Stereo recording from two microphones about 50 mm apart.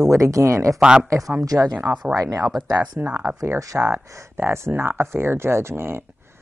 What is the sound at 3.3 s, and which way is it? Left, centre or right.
Speech, right.